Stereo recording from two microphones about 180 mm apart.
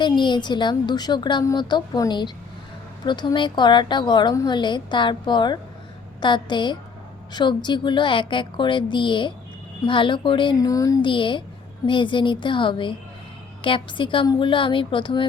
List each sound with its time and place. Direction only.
0.0 s a woman's voice: 25° left (ahead or behind)